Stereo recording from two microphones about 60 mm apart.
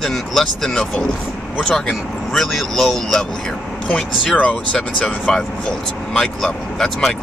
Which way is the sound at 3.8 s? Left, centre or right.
Centre.